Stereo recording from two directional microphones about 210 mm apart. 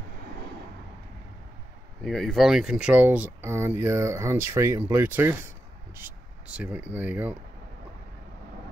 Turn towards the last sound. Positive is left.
turn(degrees=-10)  # may be behind; listen again after turning